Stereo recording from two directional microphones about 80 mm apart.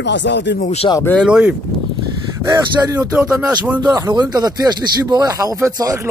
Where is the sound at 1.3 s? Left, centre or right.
Centre.